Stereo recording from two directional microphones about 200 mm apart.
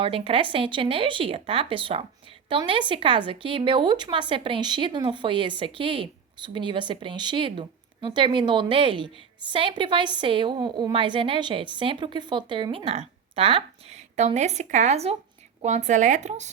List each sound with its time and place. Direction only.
0.0 s speech: 25° right (ahead or behind)